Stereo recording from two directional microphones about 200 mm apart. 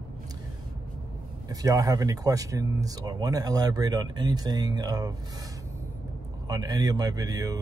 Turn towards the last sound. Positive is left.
turn(degrees=-20)  # may be behind; listen again after turning